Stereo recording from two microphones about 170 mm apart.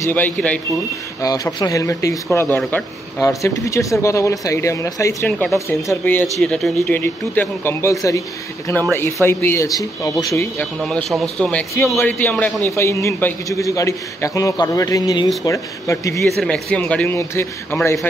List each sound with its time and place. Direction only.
0.1 s speech: 10° left (ahead or behind)
1.2 s speech: 20° left (ahead or behind)
10.8 s a man's voice: centre (ahead or behind); by 16.3 s 20° left (ahead or behind)
16.4 s speech: 5° left (ahead or behind)